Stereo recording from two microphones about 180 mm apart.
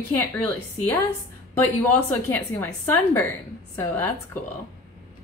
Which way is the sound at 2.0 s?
10° left (ahead or behind).